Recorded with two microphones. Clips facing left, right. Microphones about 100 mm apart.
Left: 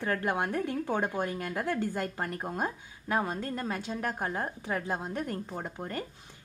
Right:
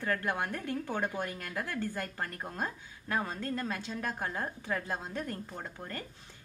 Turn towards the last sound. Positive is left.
turn(degrees=20)  # may be behind; listen again after turning